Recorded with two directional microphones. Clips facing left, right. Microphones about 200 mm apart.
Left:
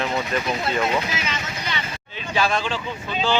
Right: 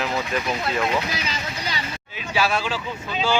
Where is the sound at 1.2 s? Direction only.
35° right (ahead or behind).